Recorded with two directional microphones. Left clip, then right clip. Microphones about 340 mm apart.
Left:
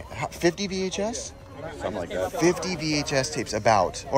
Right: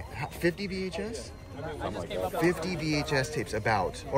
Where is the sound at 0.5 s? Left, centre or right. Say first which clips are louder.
Left 6 dB; left.